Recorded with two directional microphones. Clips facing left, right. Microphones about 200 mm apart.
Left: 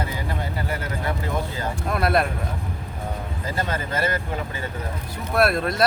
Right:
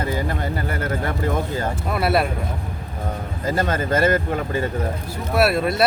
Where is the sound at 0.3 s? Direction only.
50° right (ahead or behind).